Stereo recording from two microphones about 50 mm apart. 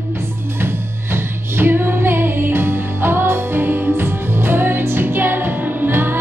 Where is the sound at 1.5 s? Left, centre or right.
Right.